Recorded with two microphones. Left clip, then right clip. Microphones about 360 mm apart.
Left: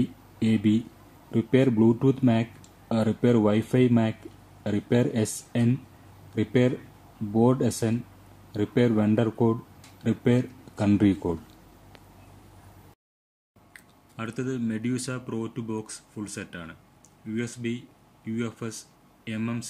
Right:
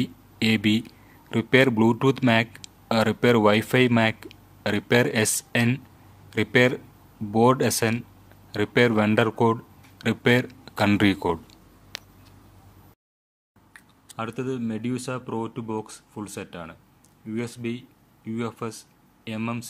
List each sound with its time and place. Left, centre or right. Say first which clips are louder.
0.4 s speech: right 3 dB; right
11.9 s a sound: right 17 dB; right
13.7 s speech: right 5 dB; centre